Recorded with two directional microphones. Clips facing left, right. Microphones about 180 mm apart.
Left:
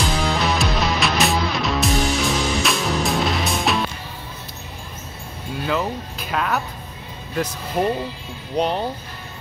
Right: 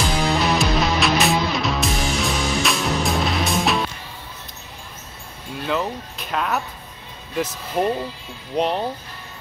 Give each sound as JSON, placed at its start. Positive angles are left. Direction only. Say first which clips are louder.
{"t": 0.0, "sound": "music", "louder": "right 1 dB", "side_deg": 0}
{"t": 5.7, "sound": "music", "louder": "even", "side_deg": 0}
{"t": 7.3, "sound": "speech", "louder": "even", "side_deg": 0}